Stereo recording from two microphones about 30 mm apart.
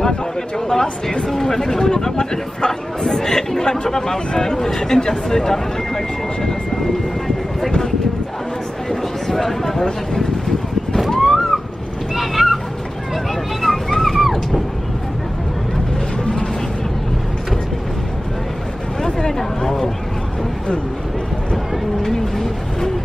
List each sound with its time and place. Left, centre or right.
0.7 s speech: centre
9.3 s speech: centre
11.1 s a sound: centre
13.1 s vehicle: centre
19.0 s speech: left
22.0 s speech: centre